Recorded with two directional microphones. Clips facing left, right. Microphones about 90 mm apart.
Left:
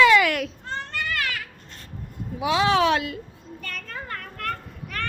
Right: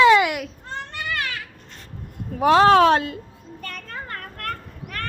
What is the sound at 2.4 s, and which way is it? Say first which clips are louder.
Speech: right 7 dB; 50° right (ahead or behind).